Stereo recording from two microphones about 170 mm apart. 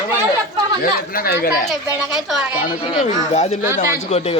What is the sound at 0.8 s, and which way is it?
Speech, 60° left (ahead or behind).